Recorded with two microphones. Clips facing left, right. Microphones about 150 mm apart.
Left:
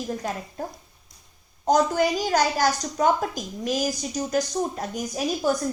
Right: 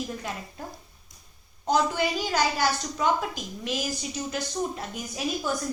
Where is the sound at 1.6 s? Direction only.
45° left (ahead or behind).